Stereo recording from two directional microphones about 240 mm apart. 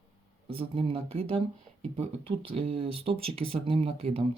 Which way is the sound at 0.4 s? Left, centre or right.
Right.